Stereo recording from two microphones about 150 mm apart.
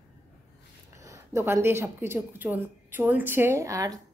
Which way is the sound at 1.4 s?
15° right (ahead or behind).